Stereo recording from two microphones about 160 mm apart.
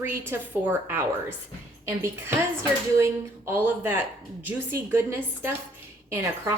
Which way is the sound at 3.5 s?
15° right (ahead or behind).